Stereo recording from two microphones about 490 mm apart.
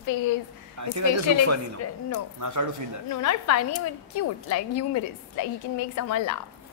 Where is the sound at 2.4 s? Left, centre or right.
Right.